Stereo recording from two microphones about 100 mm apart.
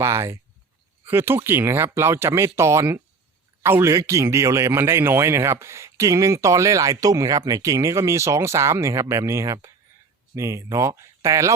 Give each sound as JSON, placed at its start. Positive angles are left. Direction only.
{"t": 0.0, "sound": "a man's voice", "side_deg": -25}